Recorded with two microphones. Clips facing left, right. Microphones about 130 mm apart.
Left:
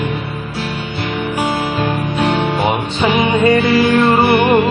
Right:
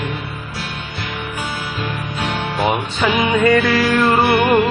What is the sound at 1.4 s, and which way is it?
Music, 65° left (ahead or behind).